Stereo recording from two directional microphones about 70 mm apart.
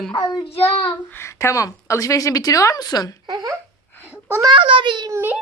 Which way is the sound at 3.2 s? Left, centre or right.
Right.